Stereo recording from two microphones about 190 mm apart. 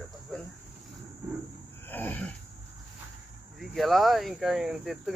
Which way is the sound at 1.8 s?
10° left (ahead or behind).